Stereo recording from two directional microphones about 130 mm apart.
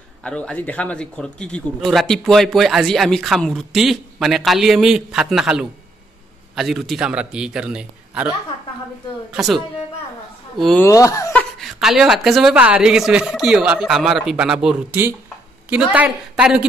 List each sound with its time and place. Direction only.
0.2 s a man's voice: 10° left (ahead or behind)
10.8 s speech: 25° left (ahead or behind)
11.3 s a man's voice: centre (ahead or behind)